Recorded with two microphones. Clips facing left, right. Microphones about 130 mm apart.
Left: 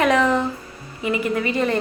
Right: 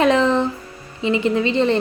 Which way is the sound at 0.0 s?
30° right (ahead or behind).